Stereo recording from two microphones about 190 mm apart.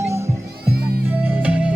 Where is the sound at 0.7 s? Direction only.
55° right (ahead or behind).